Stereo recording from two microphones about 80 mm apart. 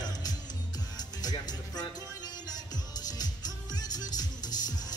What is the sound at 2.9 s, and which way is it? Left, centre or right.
Music, left.